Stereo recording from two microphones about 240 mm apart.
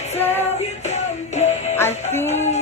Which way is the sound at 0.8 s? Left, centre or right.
Left.